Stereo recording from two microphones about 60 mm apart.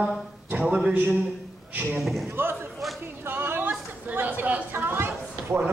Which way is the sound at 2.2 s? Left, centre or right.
Right.